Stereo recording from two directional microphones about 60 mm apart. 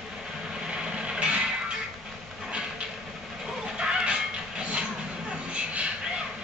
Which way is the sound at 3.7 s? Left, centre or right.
Centre.